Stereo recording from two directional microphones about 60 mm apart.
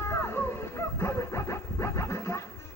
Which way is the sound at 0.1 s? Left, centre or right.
Left.